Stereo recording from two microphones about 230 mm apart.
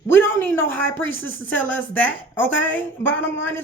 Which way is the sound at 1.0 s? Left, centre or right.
Left.